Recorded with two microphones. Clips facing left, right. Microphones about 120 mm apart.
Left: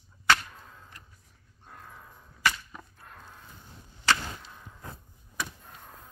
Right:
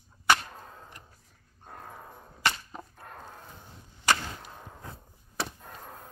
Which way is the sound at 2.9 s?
45° right (ahead or behind).